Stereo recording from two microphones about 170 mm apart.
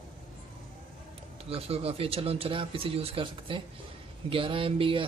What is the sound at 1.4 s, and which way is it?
Speech, 35° right (ahead or behind).